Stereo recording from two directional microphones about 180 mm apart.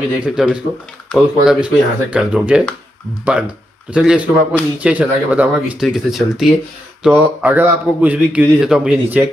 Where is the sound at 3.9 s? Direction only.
5° right (ahead or behind).